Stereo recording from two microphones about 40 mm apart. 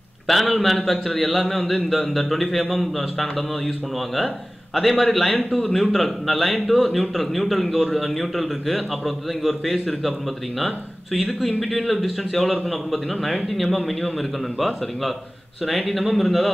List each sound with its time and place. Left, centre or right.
0.3 s speech: centre
11.1 s speech: centre
15.6 s speech: centre